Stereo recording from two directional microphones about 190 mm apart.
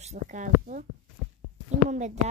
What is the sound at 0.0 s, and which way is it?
Speech, 40° right (ahead or behind).